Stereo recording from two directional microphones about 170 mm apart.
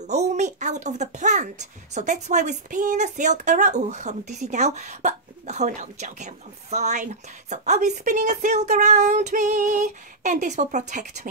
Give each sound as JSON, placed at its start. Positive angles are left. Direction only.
{"t": 0.0, "sound": "speech", "side_deg": -40}